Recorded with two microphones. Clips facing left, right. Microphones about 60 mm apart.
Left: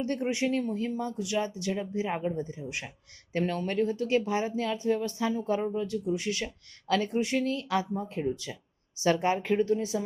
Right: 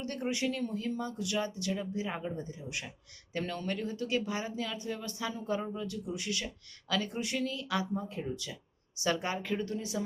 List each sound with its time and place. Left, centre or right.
0.0 s speech: left